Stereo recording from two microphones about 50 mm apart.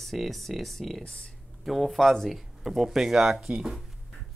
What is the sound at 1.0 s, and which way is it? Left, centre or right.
Speech, centre.